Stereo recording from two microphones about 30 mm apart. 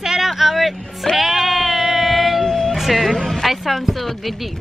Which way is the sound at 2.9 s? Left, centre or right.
Centre.